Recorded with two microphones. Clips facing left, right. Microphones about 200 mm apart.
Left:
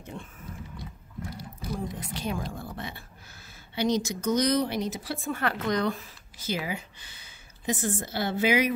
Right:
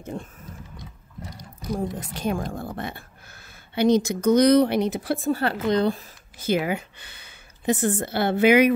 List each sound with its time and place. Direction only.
0.0 s speech: 40° right (ahead or behind)
2.0 s speech: 50° right (ahead or behind)
5.3 s speech: 30° right (ahead or behind)
6.3 s speech: 55° right (ahead or behind)